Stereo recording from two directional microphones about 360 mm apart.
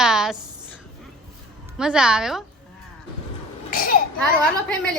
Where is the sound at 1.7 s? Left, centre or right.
Centre.